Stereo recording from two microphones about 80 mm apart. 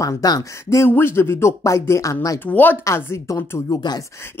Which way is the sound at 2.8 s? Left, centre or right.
Left.